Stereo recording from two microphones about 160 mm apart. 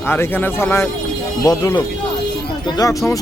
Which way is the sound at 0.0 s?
15° left (ahead or behind).